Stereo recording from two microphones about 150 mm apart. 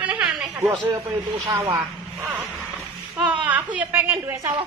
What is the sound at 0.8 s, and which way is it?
A woman's voice, 25° right (ahead or behind).